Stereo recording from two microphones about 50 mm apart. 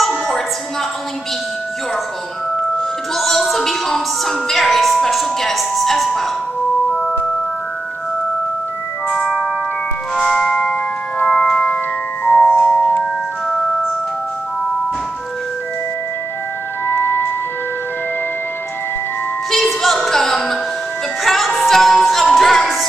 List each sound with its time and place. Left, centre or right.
3.2 s music: centre
10.2 s organ: centre
12.3 s music: left
12.5 s music: centre
16.8 s music: left
19.5 s music: centre